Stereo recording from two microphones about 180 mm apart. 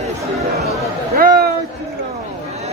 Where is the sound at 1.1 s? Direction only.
55° right (ahead or behind).